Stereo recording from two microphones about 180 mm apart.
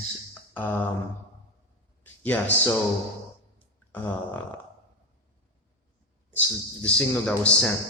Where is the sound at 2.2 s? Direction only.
10° left (ahead or behind).